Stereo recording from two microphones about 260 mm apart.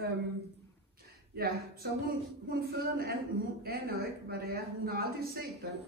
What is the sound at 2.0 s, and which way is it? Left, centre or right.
Speech, right.